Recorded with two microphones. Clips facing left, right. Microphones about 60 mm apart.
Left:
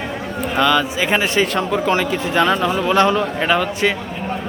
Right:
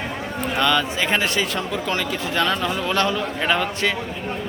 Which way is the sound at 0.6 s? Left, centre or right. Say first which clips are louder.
Left 4 dB; centre.